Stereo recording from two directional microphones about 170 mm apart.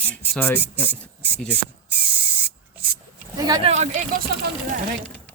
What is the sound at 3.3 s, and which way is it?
Speech, 20° right (ahead or behind).